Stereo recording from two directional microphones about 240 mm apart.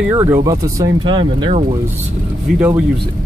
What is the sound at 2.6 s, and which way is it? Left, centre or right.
Speech, centre.